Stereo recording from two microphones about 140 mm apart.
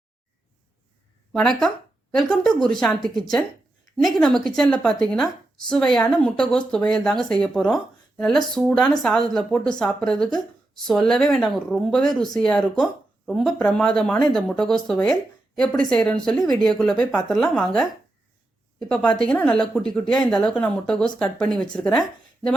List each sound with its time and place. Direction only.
1.3 s a woman's voice: 5° left (ahead or behind)